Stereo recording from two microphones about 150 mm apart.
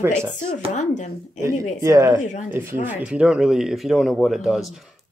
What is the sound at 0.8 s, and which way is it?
Speech, 55° left (ahead or behind).